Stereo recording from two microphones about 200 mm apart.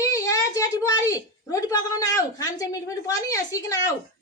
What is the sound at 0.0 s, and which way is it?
A woman's voice, 15° left (ahead or behind).